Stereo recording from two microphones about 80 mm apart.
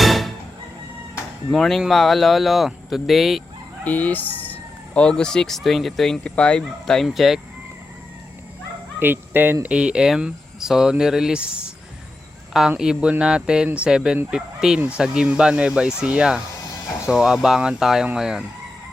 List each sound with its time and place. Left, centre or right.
0.0 s music: centre
1.5 s speech: centre
3.8 s fowl: centre
4.9 s speech: centre
9.0 s speech: right
9.6 s speech: centre
12.5 s speech: centre